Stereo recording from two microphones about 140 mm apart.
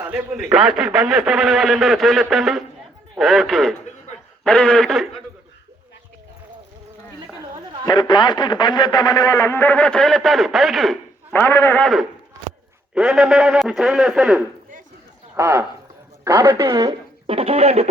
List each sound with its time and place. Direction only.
0.0 s a sound: 15° right (ahead or behind)
0.5 s a man's voice: 5° right (ahead or behind)
7.9 s a man's voice: 30° left (ahead or behind); by 10.9 s centre (ahead or behind)
11.3 s a man's voice: 15° left (ahead or behind)
11.8 s a man's voice: centre (ahead or behind); by 16.9 s 20° right (ahead or behind)
17.2 s speech: 40° right (ahead or behind)